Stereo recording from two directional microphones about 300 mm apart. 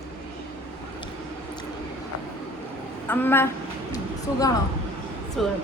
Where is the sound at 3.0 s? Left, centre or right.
Centre.